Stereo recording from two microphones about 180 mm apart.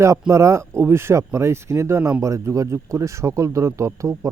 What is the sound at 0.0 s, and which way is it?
Speech, 15° right (ahead or behind).